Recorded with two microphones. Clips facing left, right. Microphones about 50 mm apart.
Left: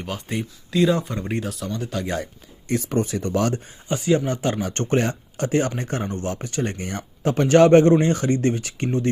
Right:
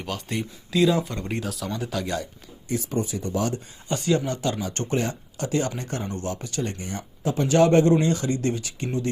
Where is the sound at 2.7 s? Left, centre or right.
Left.